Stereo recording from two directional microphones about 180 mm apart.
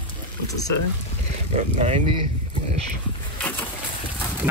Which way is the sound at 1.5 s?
40° right (ahead or behind).